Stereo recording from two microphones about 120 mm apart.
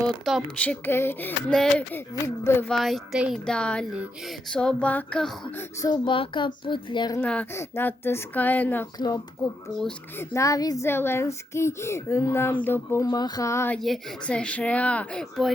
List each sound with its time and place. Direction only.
0.0 s a woman's voice: centre (ahead or behind)
0.5 s speech: 10° left (ahead or behind)
1.5 s speech: 5° left (ahead or behind)
1.9 s speech: 20° left (ahead or behind)
2.6 s speech: centre (ahead or behind)
3.4 s speech: 10° left (ahead or behind)
5.8 s a child's voice: 40° left (ahead or behind)
7.2 s speech: 15° left (ahead or behind)
9.0 s speech: 30° left (ahead or behind)
10.8 s speech: 20° left (ahead or behind)
13.7 s speech: 5° left (ahead or behind)